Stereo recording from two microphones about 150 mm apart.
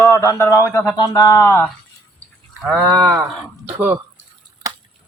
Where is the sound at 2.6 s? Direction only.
Centre (ahead or behind).